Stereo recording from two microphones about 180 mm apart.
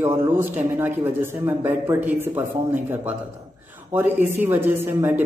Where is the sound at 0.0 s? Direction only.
15° right (ahead or behind).